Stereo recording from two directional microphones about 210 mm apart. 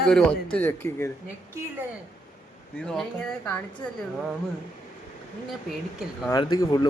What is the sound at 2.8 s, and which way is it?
Speech, 5° left (ahead or behind).